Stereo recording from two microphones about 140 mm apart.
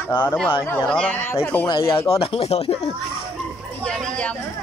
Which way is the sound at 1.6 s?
35° left (ahead or behind).